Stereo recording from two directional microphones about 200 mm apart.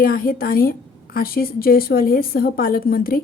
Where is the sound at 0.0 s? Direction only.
45° left (ahead or behind).